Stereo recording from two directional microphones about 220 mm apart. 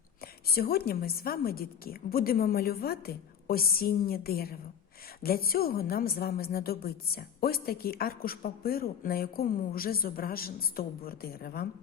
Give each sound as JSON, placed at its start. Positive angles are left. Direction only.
{"t": 0.2, "sound": "a woman's voice", "side_deg": 45}